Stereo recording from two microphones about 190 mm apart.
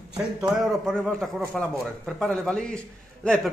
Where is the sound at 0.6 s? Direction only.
5° left (ahead or behind).